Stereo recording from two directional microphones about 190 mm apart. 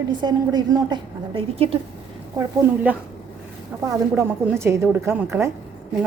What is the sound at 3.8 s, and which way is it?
A woman's voice, 15° right (ahead or behind).